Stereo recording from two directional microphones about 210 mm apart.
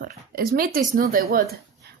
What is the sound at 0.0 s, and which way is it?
A woman's voice, 45° right (ahead or behind).